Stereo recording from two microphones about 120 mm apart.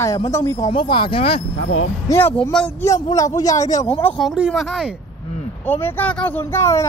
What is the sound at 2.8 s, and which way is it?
A man's voice, 30° left (ahead or behind).